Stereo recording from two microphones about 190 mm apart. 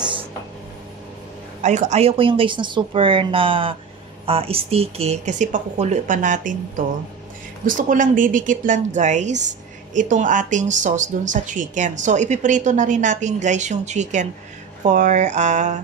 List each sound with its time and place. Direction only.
0.0 s a sound: 25° right (ahead or behind)
1.6 s speech: 40° right (ahead or behind)
7.6 s a woman's voice: 45° right (ahead or behind)